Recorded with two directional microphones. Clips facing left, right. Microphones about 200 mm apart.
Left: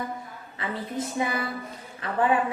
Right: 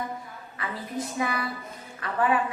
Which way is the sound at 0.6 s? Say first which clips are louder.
Left 2 dB; 25° left (ahead or behind).